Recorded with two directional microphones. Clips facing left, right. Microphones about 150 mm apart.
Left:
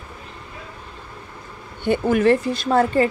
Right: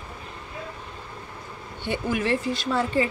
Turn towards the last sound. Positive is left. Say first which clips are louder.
# left 6 dB
turn(degrees=50)  # may be behind; listen again after turning